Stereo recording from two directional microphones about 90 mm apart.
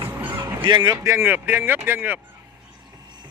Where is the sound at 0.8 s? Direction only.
30° right (ahead or behind).